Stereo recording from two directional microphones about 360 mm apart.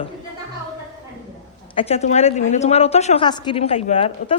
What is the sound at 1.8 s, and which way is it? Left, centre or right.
A woman's voice, centre.